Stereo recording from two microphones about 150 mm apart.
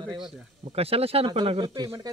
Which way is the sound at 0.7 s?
40° right (ahead or behind).